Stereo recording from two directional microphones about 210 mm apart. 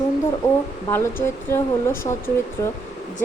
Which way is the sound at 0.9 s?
10° left (ahead or behind).